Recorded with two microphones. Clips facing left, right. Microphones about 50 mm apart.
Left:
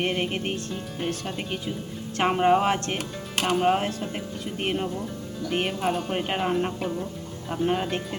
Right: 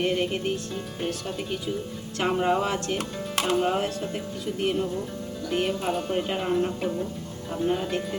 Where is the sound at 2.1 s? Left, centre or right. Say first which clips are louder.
Left 3 dB; left.